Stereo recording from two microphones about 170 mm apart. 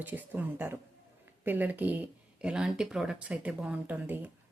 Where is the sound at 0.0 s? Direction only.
10° right (ahead or behind).